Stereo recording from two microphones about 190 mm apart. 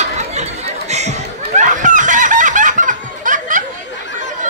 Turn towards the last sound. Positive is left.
turn(degrees=70)  # may be behind; listen again after turning